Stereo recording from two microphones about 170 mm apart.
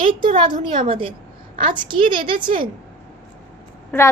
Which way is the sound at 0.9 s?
30° right (ahead or behind).